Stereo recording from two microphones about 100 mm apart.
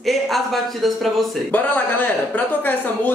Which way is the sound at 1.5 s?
15° left (ahead or behind).